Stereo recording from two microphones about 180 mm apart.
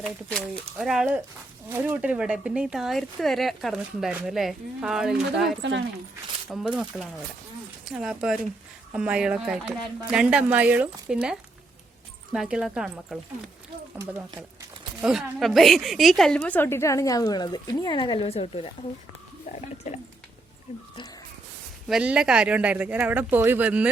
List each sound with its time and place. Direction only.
0.0 s speech: 5° left (ahead or behind)
14.0 s speech: 15° right (ahead or behind)
15.0 s a woman's voice: centre (ahead or behind); by 20.0 s 40° left (ahead or behind)
21.8 s speech: 5° right (ahead or behind)